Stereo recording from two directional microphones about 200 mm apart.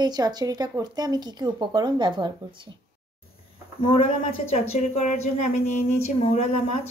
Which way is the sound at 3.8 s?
30° left (ahead or behind).